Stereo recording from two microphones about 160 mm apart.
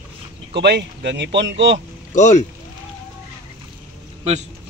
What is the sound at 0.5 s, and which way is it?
Speech, 90° right.